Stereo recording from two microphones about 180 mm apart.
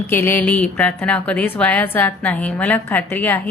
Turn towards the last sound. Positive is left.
turn(degrees=10)  # may be behind; listen again after turning